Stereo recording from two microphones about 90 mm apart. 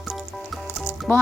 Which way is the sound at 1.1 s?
20° left (ahead or behind).